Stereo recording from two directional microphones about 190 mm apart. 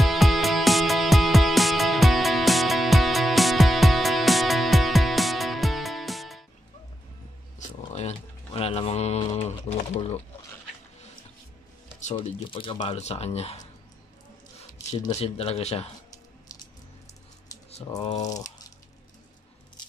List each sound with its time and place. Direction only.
0.0 s music: centre (ahead or behind)
7.8 s a sound: 30° left (ahead or behind)
12.3 s speech: 30° left (ahead or behind)
15.1 s speech: 30° left (ahead or behind)
18.0 s speech: 40° left (ahead or behind)
18.3 s speech: 20° left (ahead or behind)